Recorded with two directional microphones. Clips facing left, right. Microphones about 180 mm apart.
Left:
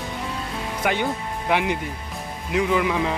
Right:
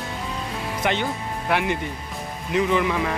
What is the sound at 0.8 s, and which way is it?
Speech, 10° left (ahead or behind).